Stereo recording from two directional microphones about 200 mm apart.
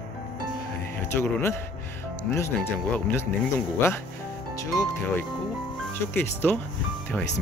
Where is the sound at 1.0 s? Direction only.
10° left (ahead or behind).